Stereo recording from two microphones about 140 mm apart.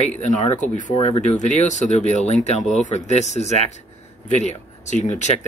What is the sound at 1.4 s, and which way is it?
Speech, 60° left (ahead or behind).